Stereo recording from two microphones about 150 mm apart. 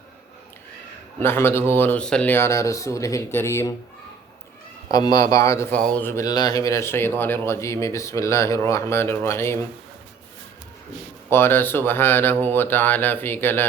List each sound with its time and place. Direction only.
1.2 s speech: 15° left (ahead or behind)
4.9 s speech: 25° left (ahead or behind)
5.7 s speech: 10° left (ahead or behind)
11.3 s speech: 15° left (ahead or behind)